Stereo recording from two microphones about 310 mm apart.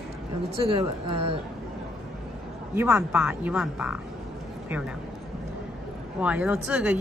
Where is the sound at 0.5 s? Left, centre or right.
Centre.